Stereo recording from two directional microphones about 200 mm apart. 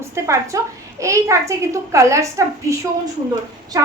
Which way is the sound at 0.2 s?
15° right (ahead or behind).